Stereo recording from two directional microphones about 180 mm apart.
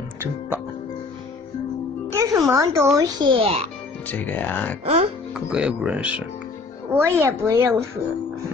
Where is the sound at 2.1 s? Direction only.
20° right (ahead or behind).